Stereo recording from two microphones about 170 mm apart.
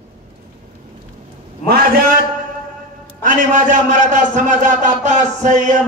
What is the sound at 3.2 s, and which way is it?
A man's voice, 50° right (ahead or behind).